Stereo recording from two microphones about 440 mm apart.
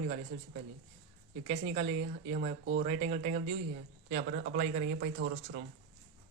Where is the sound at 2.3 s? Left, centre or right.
Right.